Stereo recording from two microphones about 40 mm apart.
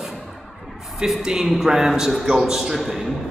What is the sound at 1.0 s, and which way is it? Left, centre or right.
A man's voice, centre.